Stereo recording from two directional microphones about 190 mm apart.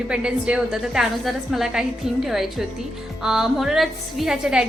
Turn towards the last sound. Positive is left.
turn(degrees=-5)  # may be behind; listen again after turning